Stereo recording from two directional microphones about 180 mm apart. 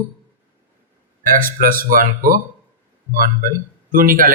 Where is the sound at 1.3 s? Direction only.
50° right (ahead or behind).